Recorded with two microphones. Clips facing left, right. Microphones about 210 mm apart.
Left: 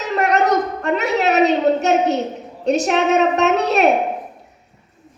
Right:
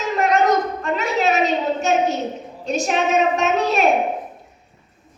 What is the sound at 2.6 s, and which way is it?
A woman's voice, 70° left (ahead or behind).